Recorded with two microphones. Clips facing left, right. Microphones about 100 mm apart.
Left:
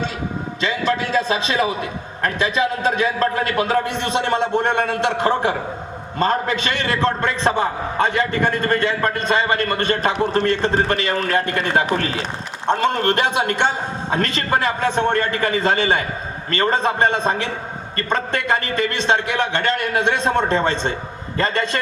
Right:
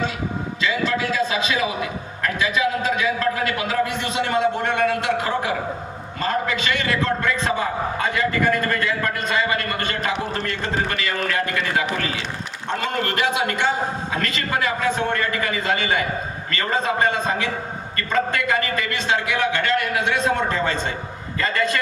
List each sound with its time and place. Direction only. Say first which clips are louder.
0.6 s a man's voice: left 2 dB; 30° left (ahead or behind)